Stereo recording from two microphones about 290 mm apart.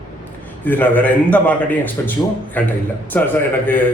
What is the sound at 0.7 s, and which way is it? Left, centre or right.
A man's voice, centre.